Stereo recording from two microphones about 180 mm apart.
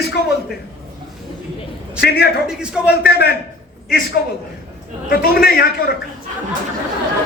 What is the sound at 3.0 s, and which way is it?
A man's voice, 60° left (ahead or behind).